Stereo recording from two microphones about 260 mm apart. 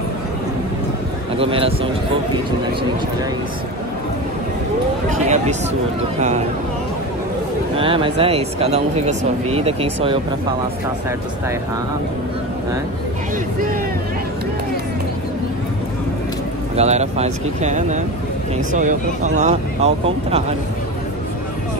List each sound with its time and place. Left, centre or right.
1.4 s speech: right
5.1 s speech: right
7.7 s speech: centre
16.7 s speech: right